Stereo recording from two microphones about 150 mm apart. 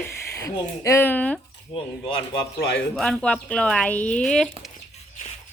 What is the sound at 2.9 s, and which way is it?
Speech, 5° left (ahead or behind).